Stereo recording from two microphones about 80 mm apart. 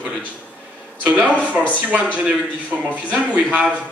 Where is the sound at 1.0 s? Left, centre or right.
Centre.